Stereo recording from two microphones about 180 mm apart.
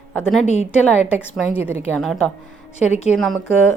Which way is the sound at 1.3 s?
10° right (ahead or behind).